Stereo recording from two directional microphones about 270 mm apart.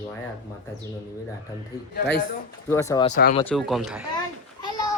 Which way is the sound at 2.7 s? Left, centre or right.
Centre.